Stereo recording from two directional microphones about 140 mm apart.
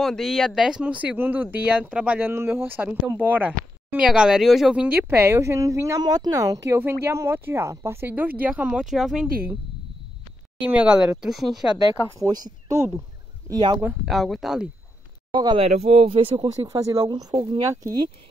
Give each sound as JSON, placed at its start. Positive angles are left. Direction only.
{"t": 0.0, "sound": "speech", "side_deg": 0}
{"t": 5.1, "sound": "a woman's voice", "side_deg": -20}
{"t": 10.6, "sound": "speech", "side_deg": -5}
{"t": 11.7, "sound": "a woman's voice", "side_deg": -30}
{"t": 13.5, "sound": "speech", "side_deg": -30}
{"t": 14.0, "sound": "speech", "side_deg": 0}
{"t": 15.3, "sound": "speech", "side_deg": -30}
{"t": 15.6, "sound": "speech", "side_deg": -45}